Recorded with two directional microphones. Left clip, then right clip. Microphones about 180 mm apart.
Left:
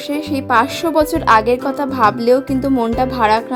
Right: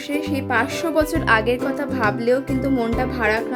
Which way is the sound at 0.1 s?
25° left (ahead or behind).